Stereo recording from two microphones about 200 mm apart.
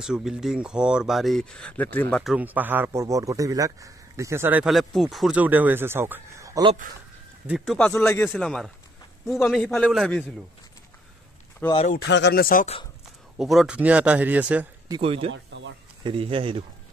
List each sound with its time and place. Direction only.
0.0 s speech: 5° right (ahead or behind)
2.3 s speech: 10° right (ahead or behind)
7.4 s speech: centre (ahead or behind)
11.6 s speech: 10° left (ahead or behind)
12.1 s speech: 55° left (ahead or behind)
13.4 s speech: centre (ahead or behind)
14.9 s speech: 30° right (ahead or behind)
15.3 s a sound: 65° right (ahead or behind)
16.0 s speech: 25° right (ahead or behind)